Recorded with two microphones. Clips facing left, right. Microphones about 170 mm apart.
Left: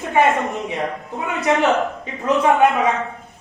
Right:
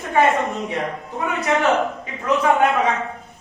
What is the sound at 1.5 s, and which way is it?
Speech, centre (ahead or behind).